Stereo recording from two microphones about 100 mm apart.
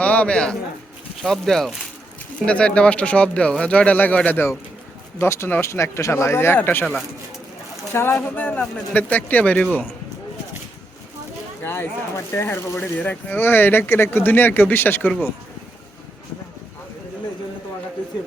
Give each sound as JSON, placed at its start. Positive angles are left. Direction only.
{"t": 0.0, "sound": "speech", "side_deg": 15}
{"t": 7.9, "sound": "speech", "side_deg": 20}
{"t": 11.6, "sound": "speech", "side_deg": 25}